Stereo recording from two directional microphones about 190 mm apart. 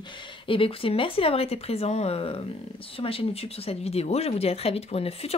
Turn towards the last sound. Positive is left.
turn(degrees=30)  # may be behind; listen again after turning